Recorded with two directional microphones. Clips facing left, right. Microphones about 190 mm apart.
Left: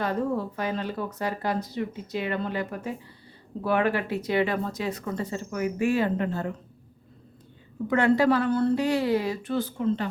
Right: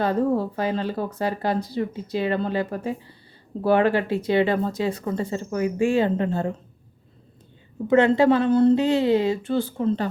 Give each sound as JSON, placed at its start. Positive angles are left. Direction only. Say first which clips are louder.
{"t": 0.0, "sound": "speech", "louder": "right 5 dB", "side_deg": -35}
{"t": 7.9, "sound": "speech", "louder": "right 4 dB", "side_deg": -25}